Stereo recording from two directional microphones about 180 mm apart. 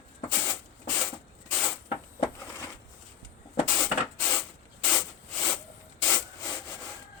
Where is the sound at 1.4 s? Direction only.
5° left (ahead or behind).